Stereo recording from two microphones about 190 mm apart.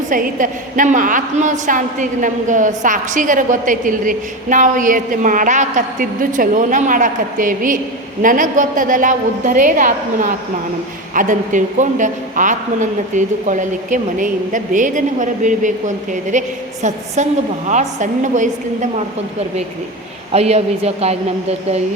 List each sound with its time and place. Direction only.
0.1 s a woman's voice: 45° right (ahead or behind)
20.3 s a man's voice: 35° right (ahead or behind)